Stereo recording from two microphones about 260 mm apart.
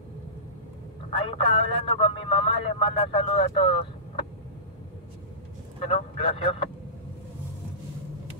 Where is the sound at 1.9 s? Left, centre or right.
Left.